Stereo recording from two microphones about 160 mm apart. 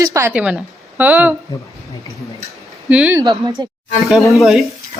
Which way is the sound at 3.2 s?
25° right (ahead or behind).